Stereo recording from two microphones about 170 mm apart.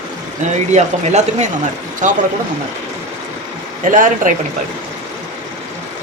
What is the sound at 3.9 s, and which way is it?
Speech, 50° right (ahead or behind).